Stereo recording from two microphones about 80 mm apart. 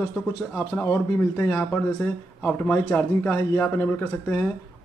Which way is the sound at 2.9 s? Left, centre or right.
Left.